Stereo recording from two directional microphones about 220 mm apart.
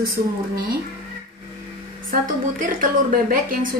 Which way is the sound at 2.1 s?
40° right (ahead or behind).